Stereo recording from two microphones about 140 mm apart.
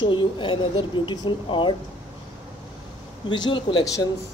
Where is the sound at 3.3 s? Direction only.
35° left (ahead or behind).